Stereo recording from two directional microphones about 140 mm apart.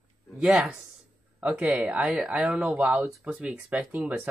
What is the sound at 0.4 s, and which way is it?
Speech, 5° right (ahead or behind).